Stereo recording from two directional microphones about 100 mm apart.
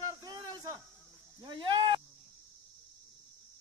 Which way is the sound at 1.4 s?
55° right (ahead or behind).